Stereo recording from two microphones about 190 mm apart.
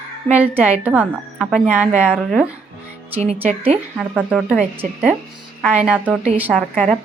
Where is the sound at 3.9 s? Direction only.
5° right (ahead or behind).